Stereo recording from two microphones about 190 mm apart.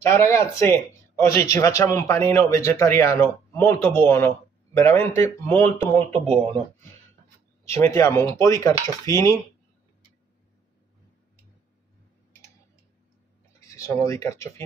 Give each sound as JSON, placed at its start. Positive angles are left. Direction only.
{"t": 0.0, "sound": "speech", "side_deg": 15}
{"t": 13.6, "sound": "speech", "side_deg": 15}